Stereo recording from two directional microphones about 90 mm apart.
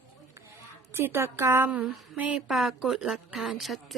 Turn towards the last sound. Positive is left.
turn(degrees=0)  # may be behind; listen again after turning